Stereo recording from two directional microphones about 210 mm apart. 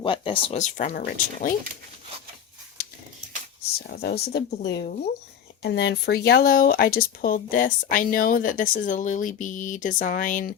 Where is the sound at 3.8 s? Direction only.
50° left (ahead or behind).